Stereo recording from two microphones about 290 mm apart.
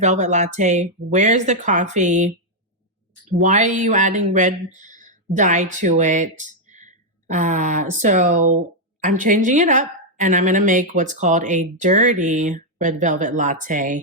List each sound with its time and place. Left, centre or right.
0.0 s a woman's voice: right
3.4 s a woman's voice: right